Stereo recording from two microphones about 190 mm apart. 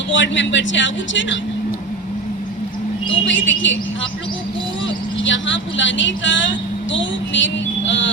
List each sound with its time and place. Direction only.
0.1 s speech: 70° left (ahead or behind)
3.1 s speech: 75° left (ahead or behind)
5.2 s speech: 75° left (ahead or behind)